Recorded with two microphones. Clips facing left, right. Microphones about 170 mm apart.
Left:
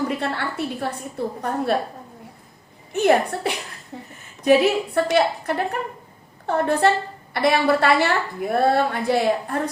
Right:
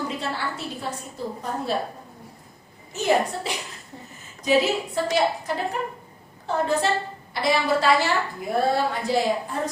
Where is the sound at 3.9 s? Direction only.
90° left.